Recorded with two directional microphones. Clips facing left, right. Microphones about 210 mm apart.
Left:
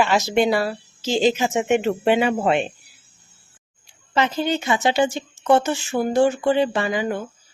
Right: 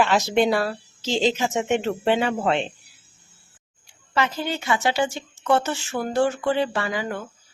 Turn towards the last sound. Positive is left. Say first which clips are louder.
# left 4 dB
turn(degrees=15)  # may be behind; listen again after turning